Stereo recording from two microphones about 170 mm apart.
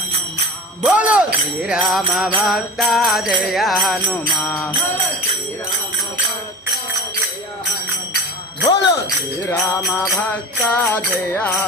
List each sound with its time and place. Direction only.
0.9 s jingle bell: 10° right (ahead or behind)
4.4 s jingle bell: 15° left (ahead or behind)
8.6 s speech: 20° left (ahead or behind)
9.5 s jingle bell: 15° left (ahead or behind)